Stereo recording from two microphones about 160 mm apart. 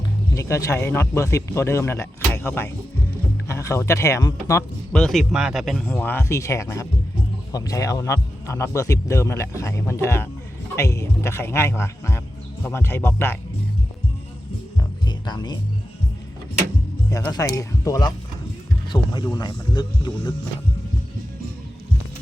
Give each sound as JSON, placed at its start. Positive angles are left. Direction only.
{"t": 0.3, "sound": "speech", "side_deg": 20}
{"t": 4.9, "sound": "speech", "side_deg": 5}
{"t": 5.9, "sound": "speech", "side_deg": 10}
{"t": 15.0, "sound": "music", "side_deg": 25}
{"t": 17.1, "sound": "speech", "side_deg": 20}